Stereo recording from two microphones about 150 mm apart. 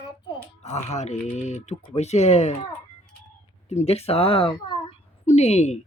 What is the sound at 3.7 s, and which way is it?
A woman's voice, 45° left (ahead or behind).